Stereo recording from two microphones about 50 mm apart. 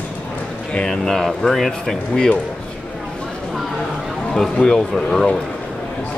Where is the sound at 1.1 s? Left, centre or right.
Centre.